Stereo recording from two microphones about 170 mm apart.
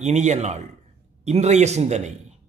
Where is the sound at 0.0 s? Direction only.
40° right (ahead or behind).